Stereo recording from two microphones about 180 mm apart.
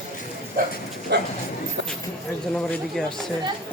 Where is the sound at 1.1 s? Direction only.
70° right (ahead or behind).